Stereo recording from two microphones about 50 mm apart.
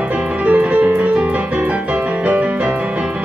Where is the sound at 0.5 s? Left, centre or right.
Right.